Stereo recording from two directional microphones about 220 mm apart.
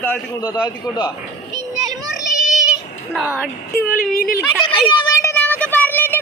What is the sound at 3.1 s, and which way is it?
Speech, 5° right (ahead or behind).